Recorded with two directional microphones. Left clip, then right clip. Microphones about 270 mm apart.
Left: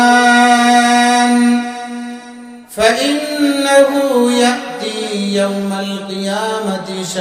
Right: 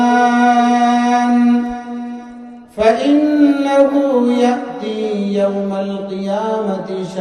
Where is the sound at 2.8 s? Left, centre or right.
Left.